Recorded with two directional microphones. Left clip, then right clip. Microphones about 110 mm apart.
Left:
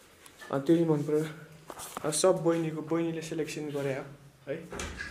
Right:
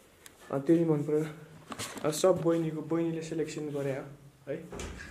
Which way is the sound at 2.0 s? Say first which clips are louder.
Right 1 dB; 25° right (ahead or behind).